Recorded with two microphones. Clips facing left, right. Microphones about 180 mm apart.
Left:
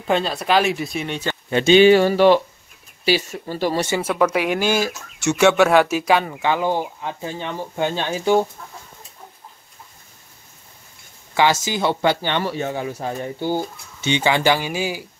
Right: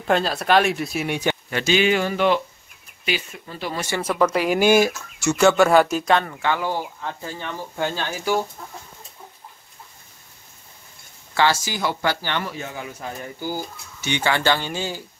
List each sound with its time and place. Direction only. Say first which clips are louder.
0.0 s speech: even; centre (ahead or behind)
1.5 s speech: left 9 dB; 30° left (ahead or behind)
4.0 s speech: right 2 dB; centre (ahead or behind)
4.6 s speech: right 4 dB; 15° right (ahead or behind)
5.4 s speech: left 1 dB; centre (ahead or behind); by 8.5 s 25° left (ahead or behind)
11.3 s speech: left 2 dB; 20° left (ahead or behind)
12.4 s speech: left 8 dB; 30° left (ahead or behind); by 15.0 s 10° left (ahead or behind)